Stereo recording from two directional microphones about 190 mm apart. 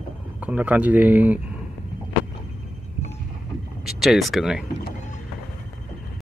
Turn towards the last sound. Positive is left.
turn(degrees=0)  # may be behind; listen again after turning